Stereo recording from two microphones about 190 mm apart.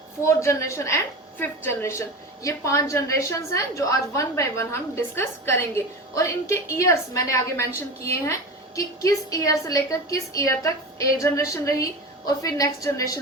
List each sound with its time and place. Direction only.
0.3 s a woman's voice: 15° left (ahead or behind)